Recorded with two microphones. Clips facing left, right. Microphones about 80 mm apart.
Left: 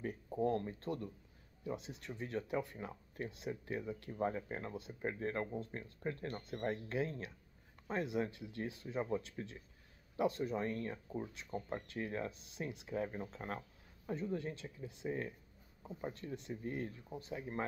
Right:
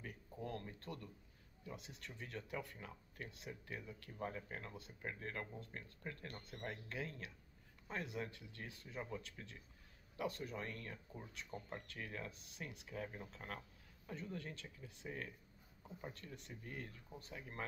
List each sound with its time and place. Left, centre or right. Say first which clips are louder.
0.0 s speech: left 12 dB; left